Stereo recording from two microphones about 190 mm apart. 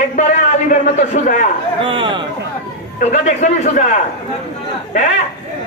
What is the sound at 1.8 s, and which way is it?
Speech, 25° right (ahead or behind).